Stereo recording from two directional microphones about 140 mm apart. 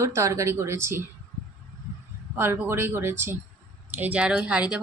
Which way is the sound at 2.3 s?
15° right (ahead or behind).